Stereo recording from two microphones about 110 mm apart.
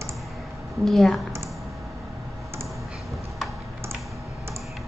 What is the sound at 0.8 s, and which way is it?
Speech, centre (ahead or behind).